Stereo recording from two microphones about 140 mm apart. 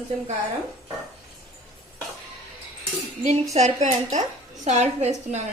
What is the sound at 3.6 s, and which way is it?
A woman's voice, 60° right (ahead or behind).